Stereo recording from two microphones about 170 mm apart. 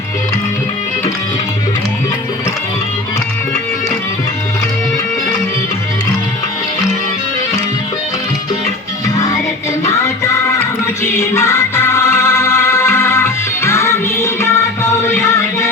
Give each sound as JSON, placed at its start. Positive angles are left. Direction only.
{"t": 11.0, "sound": "music", "side_deg": 15}